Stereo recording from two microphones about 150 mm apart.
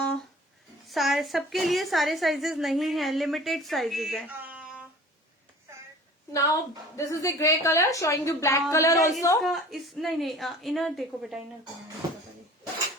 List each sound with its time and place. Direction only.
0.9 s a woman's voice: centre (ahead or behind)
4.3 s a sound: 10° right (ahead or behind)
6.3 s a woman's voice: 20° left (ahead or behind)
9.4 s a woman's voice: centre (ahead or behind)